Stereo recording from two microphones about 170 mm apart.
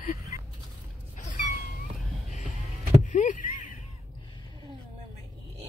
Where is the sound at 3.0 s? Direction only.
45° left (ahead or behind).